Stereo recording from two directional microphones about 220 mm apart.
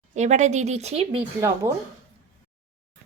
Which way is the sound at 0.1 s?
30° right (ahead or behind).